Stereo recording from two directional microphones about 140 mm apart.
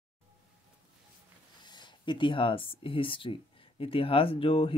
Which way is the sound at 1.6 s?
30° left (ahead or behind).